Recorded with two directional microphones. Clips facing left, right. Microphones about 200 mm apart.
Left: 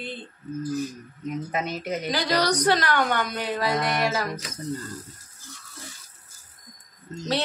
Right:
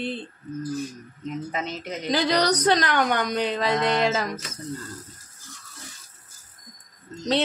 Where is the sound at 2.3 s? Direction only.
20° right (ahead or behind).